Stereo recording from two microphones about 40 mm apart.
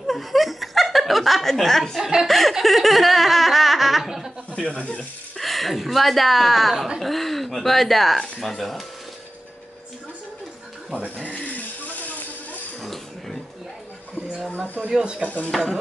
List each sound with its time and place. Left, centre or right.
0.0 s chuckle: centre
2.2 s speech: centre
2.6 s laughter: centre
4.6 s speech: centre
5.4 s speech: centre
11.2 s a sound: left
12.8 s a sound: centre
14.9 s speech: centre
15.2 s speech: left
15.5 s speech: centre